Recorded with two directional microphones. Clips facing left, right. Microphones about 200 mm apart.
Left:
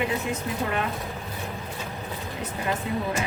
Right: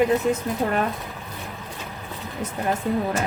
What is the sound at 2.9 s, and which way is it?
Speech, 45° right (ahead or behind).